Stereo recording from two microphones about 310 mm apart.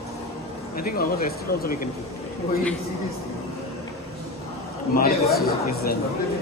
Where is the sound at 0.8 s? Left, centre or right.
Left.